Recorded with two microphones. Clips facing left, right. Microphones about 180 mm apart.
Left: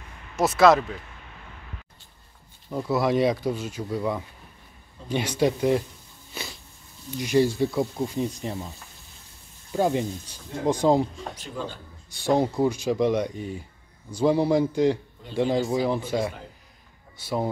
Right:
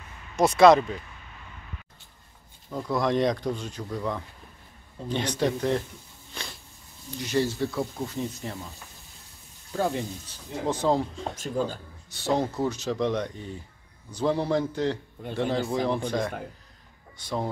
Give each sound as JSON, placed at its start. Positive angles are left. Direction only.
{"t": 0.4, "sound": "speech", "side_deg": 5}
{"t": 2.7, "sound": "speech", "side_deg": 5}
{"t": 6.3, "sound": "a sound", "side_deg": 5}
{"t": 7.2, "sound": "speech", "side_deg": 15}
{"t": 9.7, "sound": "speech", "side_deg": 20}
{"t": 11.3, "sound": "speech", "side_deg": -40}
{"t": 12.1, "sound": "speech", "side_deg": 15}